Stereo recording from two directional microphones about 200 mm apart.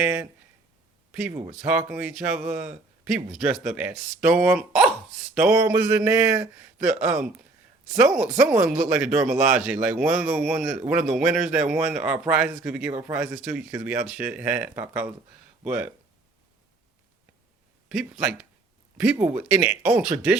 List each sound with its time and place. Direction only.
0.0 s speech: 10° right (ahead or behind)
1.3 s speech: 30° right (ahead or behind)
1.5 s speech: 5° right (ahead or behind)
17.8 s speech: 5° right (ahead or behind)